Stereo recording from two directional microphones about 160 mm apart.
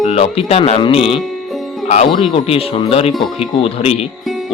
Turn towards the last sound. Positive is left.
turn(degrees=40)  # may be behind; listen again after turning